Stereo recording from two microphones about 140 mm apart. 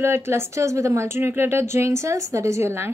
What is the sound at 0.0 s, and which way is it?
A woman's voice, 20° right (ahead or behind).